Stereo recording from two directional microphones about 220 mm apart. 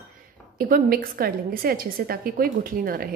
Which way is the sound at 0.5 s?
40° right (ahead or behind).